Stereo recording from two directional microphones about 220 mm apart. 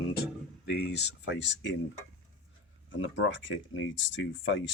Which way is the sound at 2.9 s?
60° left (ahead or behind).